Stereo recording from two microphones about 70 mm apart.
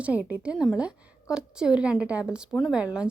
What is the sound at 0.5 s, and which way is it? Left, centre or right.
A woman's voice, centre.